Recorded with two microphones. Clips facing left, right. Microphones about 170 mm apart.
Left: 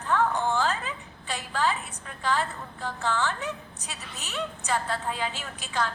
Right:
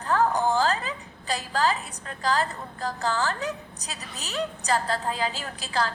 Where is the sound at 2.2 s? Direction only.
35° right (ahead or behind).